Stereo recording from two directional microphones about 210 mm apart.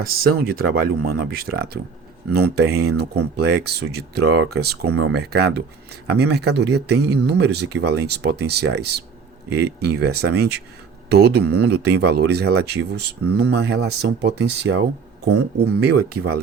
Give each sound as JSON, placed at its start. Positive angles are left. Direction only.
{"t": 0.0, "sound": "speech", "side_deg": -45}
{"t": 2.6, "sound": "speech", "side_deg": -90}
{"t": 3.0, "sound": "speech", "side_deg": -50}